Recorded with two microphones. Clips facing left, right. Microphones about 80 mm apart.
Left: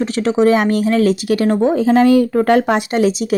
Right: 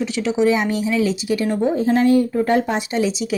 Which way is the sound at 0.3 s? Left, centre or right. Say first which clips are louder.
Left 5 dB; left.